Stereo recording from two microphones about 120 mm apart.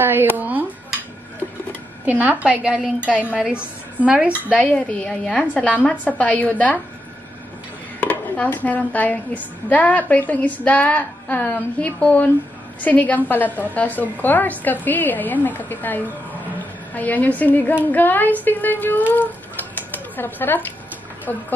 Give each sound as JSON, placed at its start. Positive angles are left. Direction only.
{"t": 0.0, "sound": "a sound", "side_deg": -15}
{"t": 2.0, "sound": "a woman's voice", "side_deg": -15}
{"t": 4.6, "sound": "speech", "side_deg": 10}
{"t": 8.0, "sound": "speech", "side_deg": 15}